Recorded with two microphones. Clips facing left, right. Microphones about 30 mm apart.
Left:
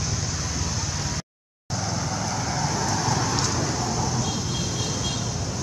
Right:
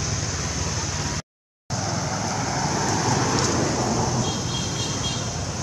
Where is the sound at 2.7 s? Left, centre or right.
Right.